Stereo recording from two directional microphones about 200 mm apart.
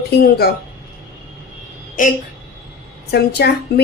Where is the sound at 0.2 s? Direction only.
50° left (ahead or behind).